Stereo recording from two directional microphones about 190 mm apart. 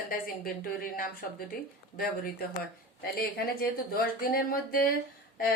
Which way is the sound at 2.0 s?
50° left (ahead or behind).